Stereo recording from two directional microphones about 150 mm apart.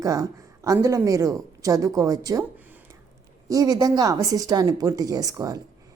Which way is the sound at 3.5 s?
25° right (ahead or behind).